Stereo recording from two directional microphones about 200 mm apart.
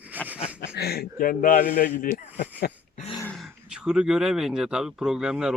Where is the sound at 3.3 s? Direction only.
Centre (ahead or behind).